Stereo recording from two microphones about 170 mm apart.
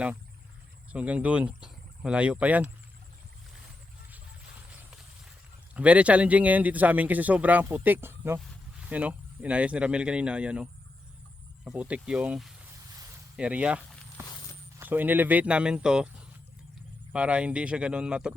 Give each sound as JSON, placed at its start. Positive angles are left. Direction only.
{"t": 0.9, "sound": "a man's voice", "side_deg": -5}
{"t": 5.7, "sound": "a man's voice", "side_deg": -10}
{"t": 14.2, "sound": "walk", "side_deg": -15}
{"t": 14.8, "sound": "a man's voice", "side_deg": -10}